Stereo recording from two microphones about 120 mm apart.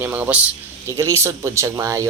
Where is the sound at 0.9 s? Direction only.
25° right (ahead or behind).